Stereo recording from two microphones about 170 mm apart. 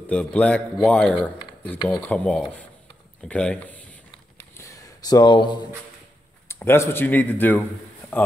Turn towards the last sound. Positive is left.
turn(degrees=10)  # may be behind; listen again after turning